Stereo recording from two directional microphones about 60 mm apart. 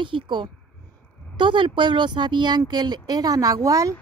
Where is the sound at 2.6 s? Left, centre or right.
Right.